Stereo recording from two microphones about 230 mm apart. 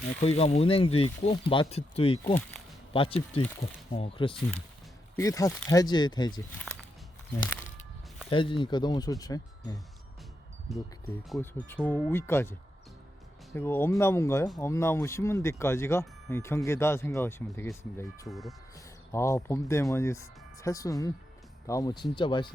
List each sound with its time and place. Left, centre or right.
0.2 s speech: left
8.3 s speech: left
11.3 s speech: centre
18.3 s speech: centre
19.1 s speech: centre